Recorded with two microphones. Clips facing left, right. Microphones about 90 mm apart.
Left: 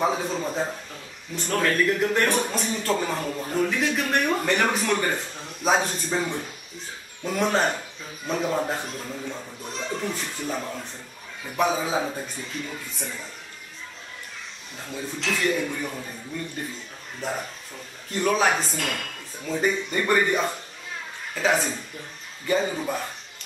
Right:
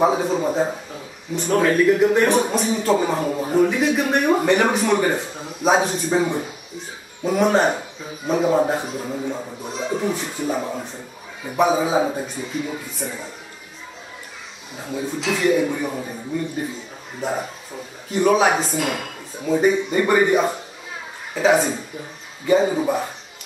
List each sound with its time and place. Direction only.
0.0 s speech: 5° right (ahead or behind)
9.1 s speech: 20° right (ahead or behind)
9.6 s speech: 5° right (ahead or behind)
14.8 s speech: 5° right (ahead or behind)